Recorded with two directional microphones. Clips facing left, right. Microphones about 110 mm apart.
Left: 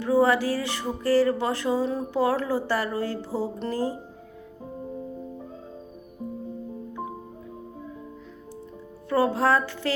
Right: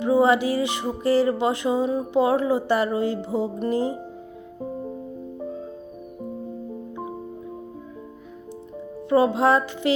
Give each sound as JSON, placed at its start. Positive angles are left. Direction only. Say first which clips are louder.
{"t": 0.0, "sound": "music", "louder": "right 2 dB", "side_deg": -20}
{"t": 9.0, "sound": "music", "louder": "right 4 dB", "side_deg": -20}